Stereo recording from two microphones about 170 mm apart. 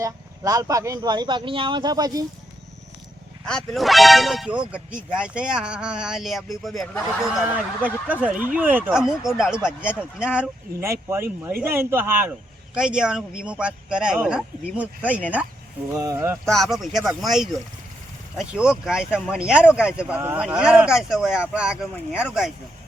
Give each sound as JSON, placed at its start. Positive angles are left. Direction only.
{"t": 0.0, "sound": "speech", "side_deg": -20}
{"t": 3.4, "sound": "speech", "side_deg": 5}
{"t": 16.5, "sound": "speech", "side_deg": 0}